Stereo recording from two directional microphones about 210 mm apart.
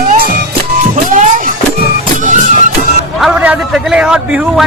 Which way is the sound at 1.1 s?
40° right (ahead or behind).